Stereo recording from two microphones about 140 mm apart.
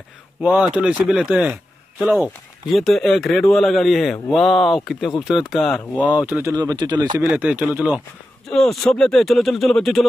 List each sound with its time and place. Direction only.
0.4 s speech: 5° right (ahead or behind)
2.1 s speech: centre (ahead or behind)
5.9 s speech: 10° right (ahead or behind); by 7.2 s 30° right (ahead or behind)
7.2 s speech: 10° right (ahead or behind)
8.5 s speech: centre (ahead or behind)